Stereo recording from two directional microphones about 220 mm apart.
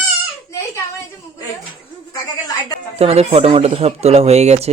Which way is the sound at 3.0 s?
25° right (ahead or behind).